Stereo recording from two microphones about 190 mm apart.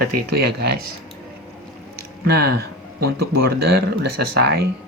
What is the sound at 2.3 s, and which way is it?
Speech, 60° right (ahead or behind).